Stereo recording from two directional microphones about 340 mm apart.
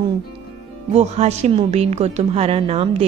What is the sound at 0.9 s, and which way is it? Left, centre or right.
A woman's voice, centre.